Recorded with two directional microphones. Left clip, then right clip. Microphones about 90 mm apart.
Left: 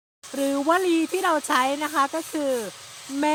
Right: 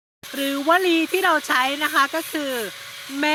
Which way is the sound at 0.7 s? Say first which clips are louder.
Right 5 dB; 45° left (ahead or behind).